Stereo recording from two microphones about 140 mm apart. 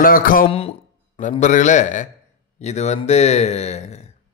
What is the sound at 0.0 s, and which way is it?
Speech, 90° left.